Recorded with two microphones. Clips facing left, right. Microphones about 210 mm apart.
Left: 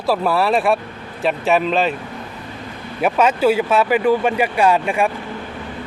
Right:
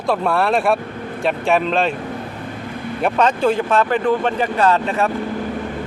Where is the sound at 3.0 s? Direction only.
5° left (ahead or behind).